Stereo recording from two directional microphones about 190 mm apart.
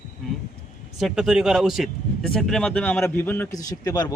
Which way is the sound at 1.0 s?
Centre (ahead or behind).